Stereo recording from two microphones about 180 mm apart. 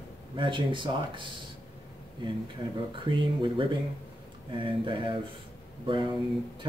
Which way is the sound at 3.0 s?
25° right (ahead or behind).